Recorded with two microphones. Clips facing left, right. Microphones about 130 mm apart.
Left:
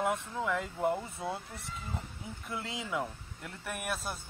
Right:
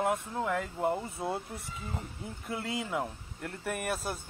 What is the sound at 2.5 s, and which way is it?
Speech, 55° right (ahead or behind).